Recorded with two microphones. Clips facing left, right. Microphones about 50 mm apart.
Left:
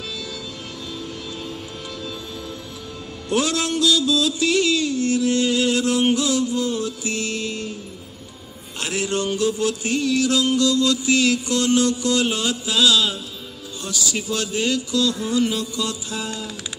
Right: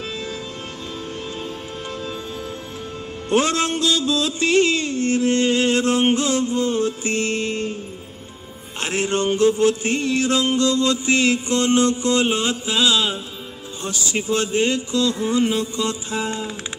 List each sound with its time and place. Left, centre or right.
3.3 s music: right
8.7 s music: right